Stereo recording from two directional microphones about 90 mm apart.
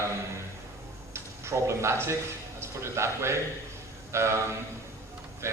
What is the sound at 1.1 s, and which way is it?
A man's voice, 30° right (ahead or behind).